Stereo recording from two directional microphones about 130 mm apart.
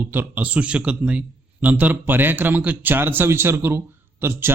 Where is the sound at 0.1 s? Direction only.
15° right (ahead or behind).